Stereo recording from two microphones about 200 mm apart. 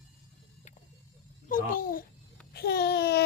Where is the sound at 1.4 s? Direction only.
45° left (ahead or behind).